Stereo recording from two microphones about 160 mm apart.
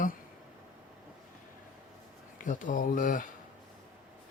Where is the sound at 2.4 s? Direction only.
55° left (ahead or behind).